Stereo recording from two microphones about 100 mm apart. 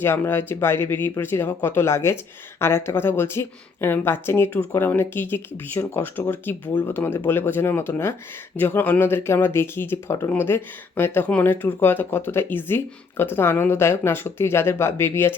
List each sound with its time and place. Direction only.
0.0 s speech: 25° left (ahead or behind)